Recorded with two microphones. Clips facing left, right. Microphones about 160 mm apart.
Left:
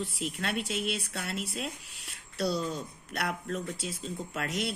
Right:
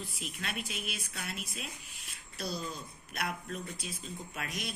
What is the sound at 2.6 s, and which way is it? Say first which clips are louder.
Speech: left 7 dB; 75° left (ahead or behind).